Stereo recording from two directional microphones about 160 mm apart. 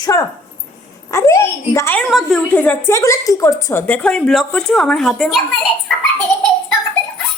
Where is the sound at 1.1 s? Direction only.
15° left (ahead or behind).